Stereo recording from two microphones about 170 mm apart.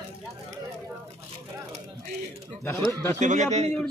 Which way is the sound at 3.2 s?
45° right (ahead or behind).